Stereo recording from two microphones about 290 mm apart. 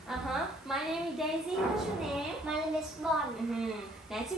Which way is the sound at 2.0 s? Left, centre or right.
Centre.